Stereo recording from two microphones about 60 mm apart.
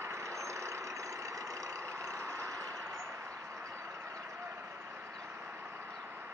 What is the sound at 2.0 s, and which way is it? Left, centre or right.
Vehicle, right.